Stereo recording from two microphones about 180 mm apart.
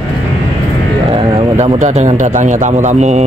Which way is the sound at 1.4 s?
35° right (ahead or behind).